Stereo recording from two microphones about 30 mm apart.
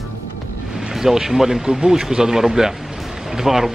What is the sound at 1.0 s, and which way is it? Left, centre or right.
Speech, centre.